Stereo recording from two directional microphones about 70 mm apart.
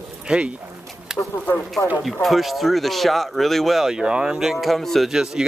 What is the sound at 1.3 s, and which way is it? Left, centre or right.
Speech, left.